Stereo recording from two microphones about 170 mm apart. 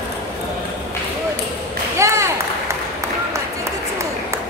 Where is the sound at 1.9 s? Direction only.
15° right (ahead or behind).